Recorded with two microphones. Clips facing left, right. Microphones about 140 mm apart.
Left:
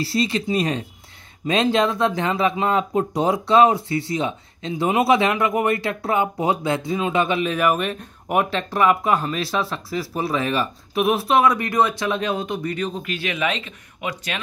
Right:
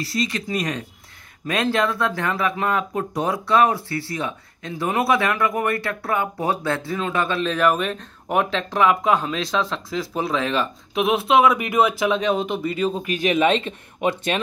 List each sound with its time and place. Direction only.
0.0 s speech: 30° left (ahead or behind); by 12.5 s centre (ahead or behind)
13.1 s speech: 15° right (ahead or behind)
13.4 s speech: 30° right (ahead or behind)